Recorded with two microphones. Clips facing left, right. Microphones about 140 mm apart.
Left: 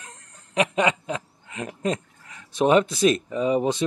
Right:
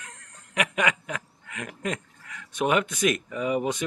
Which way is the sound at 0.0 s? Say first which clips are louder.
Left 1 dB; 30° left (ahead or behind).